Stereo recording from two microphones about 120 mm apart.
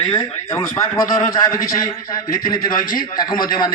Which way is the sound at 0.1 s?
25° left (ahead or behind).